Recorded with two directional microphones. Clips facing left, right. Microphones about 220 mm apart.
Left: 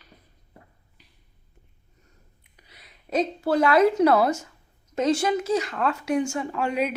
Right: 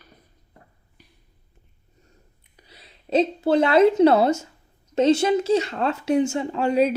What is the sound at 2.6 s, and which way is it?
A woman's voice, 30° right (ahead or behind).